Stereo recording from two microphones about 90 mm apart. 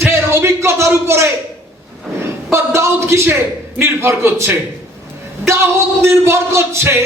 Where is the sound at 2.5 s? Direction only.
30° right (ahead or behind).